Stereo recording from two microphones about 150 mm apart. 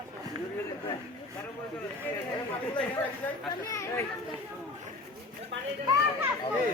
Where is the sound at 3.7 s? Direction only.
20° left (ahead or behind).